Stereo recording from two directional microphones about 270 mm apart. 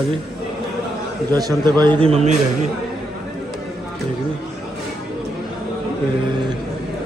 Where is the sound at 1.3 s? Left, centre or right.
Centre.